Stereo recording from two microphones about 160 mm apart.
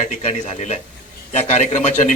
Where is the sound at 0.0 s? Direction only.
50° left (ahead or behind).